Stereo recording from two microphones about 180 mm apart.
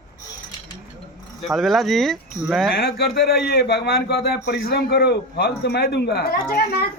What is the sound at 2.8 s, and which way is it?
A man's voice, 65° left (ahead or behind).